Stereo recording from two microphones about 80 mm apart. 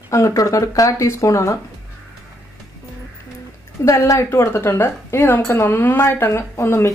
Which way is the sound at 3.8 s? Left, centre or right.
Left.